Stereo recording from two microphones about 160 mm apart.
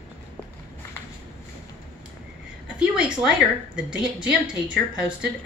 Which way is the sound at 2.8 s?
5° right (ahead or behind).